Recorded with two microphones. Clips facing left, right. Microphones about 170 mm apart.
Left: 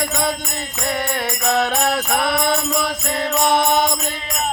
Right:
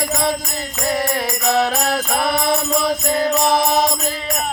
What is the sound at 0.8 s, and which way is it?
Mantra, centre (ahead or behind).